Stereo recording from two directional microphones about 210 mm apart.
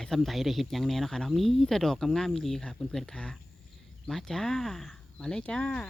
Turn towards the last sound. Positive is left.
turn(degrees=5)  # may be behind; listen again after turning